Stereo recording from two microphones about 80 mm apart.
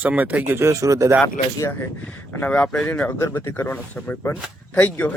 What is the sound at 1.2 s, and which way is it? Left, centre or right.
Speech, left.